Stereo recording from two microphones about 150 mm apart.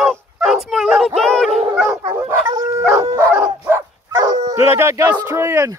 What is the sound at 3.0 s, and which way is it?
Dog, 20° right (ahead or behind).